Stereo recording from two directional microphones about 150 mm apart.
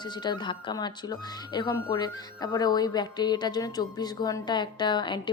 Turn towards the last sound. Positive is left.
turn(degrees=30)  # may be behind; listen again after turning